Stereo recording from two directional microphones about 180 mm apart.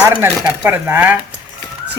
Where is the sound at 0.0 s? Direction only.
15° right (ahead or behind).